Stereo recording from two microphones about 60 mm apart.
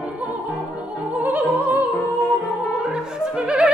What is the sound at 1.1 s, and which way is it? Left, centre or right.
Opera, right.